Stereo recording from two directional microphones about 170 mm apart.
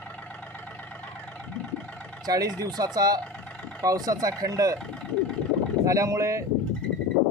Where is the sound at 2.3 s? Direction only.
20° right (ahead or behind).